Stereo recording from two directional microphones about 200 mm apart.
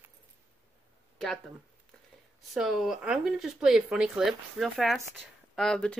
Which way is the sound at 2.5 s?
Centre (ahead or behind).